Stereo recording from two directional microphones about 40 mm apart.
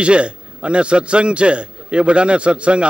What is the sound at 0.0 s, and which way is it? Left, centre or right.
A man's voice, right.